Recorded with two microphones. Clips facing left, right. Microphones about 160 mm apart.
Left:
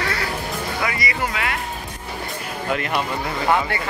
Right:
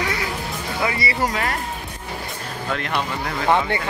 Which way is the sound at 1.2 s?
40° right (ahead or behind).